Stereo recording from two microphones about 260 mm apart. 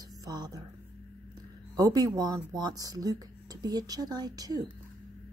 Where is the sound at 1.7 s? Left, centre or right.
Centre.